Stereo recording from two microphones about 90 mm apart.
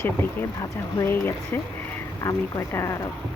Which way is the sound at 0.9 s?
25° left (ahead or behind).